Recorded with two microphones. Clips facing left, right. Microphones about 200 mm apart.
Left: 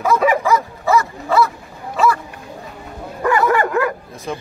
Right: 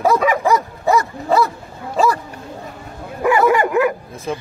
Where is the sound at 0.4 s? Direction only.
35° right (ahead or behind).